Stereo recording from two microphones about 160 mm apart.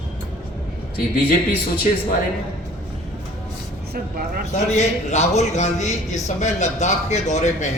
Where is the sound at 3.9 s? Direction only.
70° right (ahead or behind).